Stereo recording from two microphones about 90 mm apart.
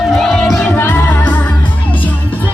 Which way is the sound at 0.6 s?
20° left (ahead or behind).